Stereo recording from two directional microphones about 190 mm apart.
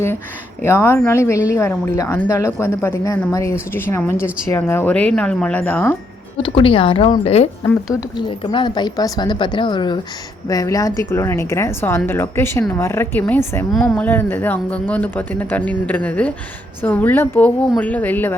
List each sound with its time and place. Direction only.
0.6 s a woman's voice: 15° left (ahead or behind)
6.3 s a woman's voice: 30° left (ahead or behind); by 18.3 s 10° left (ahead or behind)